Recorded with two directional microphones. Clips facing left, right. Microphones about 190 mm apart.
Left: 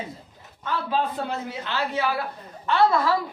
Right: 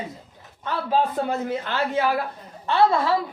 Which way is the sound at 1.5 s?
50° right (ahead or behind).